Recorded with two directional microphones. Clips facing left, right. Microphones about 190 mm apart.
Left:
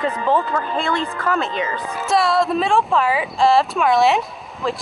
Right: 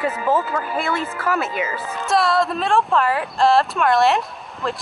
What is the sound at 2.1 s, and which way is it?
A woman's voice, centre (ahead or behind).